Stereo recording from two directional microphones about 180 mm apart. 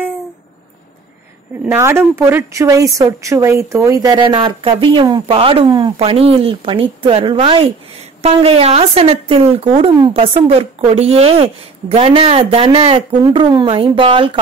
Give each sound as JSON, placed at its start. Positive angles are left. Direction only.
{"t": 1.7, "sound": "a woman's voice", "side_deg": -15}